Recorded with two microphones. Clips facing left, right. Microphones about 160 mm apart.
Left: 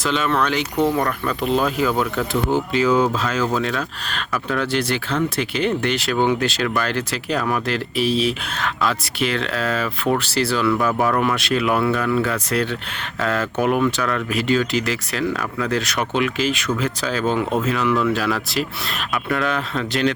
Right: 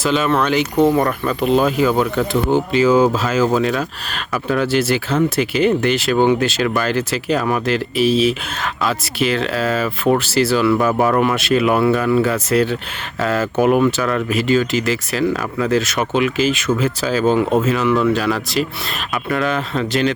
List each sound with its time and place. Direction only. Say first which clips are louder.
0.0 s speech: right 4 dB; 5° right (ahead or behind)
15.2 s speech: right 4 dB; 10° right (ahead or behind)